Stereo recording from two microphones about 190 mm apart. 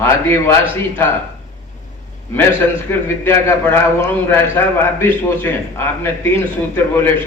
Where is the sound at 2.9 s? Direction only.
15° left (ahead or behind).